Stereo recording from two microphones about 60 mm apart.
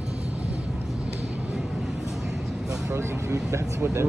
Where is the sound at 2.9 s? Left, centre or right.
Right.